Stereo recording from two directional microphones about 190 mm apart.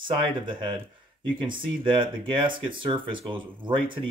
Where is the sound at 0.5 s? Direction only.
25° right (ahead or behind).